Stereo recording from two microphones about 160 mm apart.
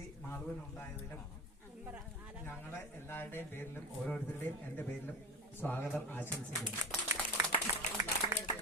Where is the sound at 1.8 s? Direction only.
10° right (ahead or behind).